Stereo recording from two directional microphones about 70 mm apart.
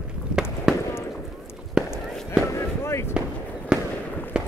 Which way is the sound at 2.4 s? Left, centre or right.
Left.